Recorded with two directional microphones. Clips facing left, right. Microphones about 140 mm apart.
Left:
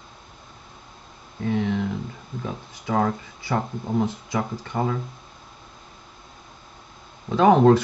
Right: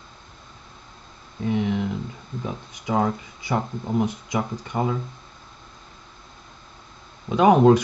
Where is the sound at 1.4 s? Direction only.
15° right (ahead or behind).